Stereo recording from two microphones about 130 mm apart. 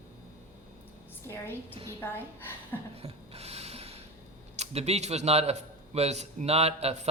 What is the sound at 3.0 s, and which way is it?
Filing, 50° right (ahead or behind).